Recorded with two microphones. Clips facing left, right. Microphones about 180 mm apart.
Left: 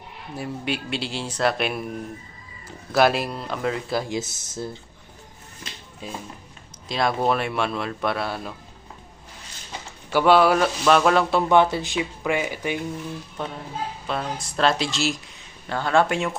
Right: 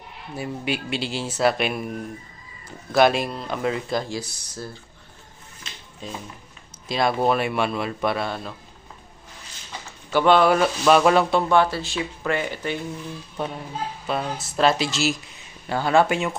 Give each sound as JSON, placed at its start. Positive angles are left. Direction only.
{"t": 0.3, "sound": "a man's voice", "side_deg": 0}
{"t": 2.9, "sound": "a man's voice", "side_deg": 5}
{"t": 4.1, "sound": "speech", "side_deg": 20}
{"t": 6.0, "sound": "speech", "side_deg": 10}
{"t": 6.8, "sound": "a man's voice", "side_deg": 0}
{"t": 10.1, "sound": "a man's voice", "side_deg": 5}
{"t": 11.4, "sound": "speech", "side_deg": 20}
{"t": 14.1, "sound": "a man's voice", "side_deg": -5}